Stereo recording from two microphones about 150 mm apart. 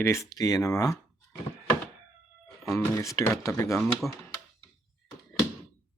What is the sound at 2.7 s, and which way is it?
Speech, 20° left (ahead or behind).